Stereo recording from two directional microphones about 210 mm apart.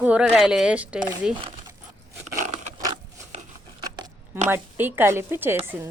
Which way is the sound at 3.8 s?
20° right (ahead or behind).